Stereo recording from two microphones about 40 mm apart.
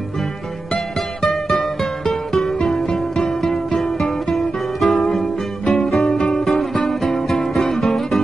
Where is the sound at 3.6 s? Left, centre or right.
Centre.